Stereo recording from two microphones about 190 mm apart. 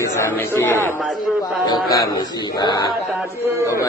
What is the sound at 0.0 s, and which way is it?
A man's voice, 15° left (ahead or behind).